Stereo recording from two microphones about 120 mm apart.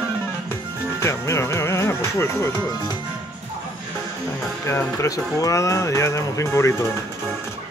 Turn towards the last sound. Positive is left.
turn(degrees=25)  # may be behind; listen again after turning